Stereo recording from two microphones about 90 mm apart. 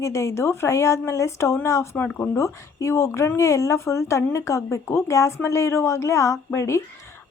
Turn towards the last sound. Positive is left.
turn(degrees=30)  # may be behind; listen again after turning